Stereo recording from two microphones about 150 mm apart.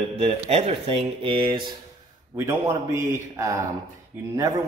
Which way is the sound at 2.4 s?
20° right (ahead or behind).